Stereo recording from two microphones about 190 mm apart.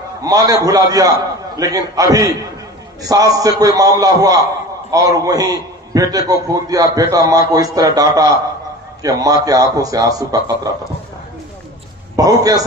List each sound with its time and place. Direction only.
0.2 s a man's voice: 20° right (ahead or behind)
12.2 s a man's voice: 20° right (ahead or behind)